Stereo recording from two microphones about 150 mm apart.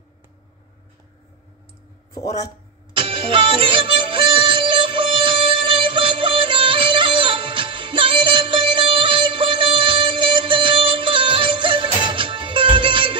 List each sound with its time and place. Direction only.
2.1 s speech: 25° left (ahead or behind)
2.9 s music: 35° right (ahead or behind)